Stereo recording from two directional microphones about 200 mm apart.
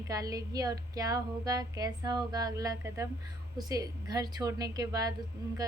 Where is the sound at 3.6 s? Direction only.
20° right (ahead or behind).